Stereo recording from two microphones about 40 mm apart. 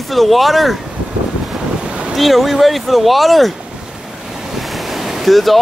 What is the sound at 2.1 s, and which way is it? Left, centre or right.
Speech, centre.